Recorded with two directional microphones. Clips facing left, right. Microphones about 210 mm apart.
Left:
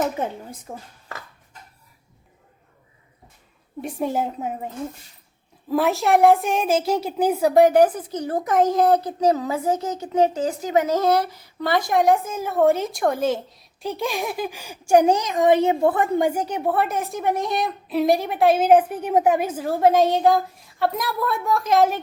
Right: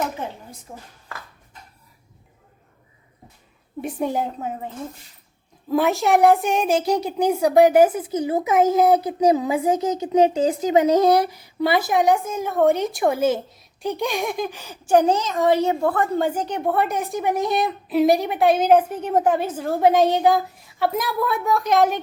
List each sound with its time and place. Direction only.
0.7 s speech: 55° left (ahead or behind)
3.8 s speech: centre (ahead or behind)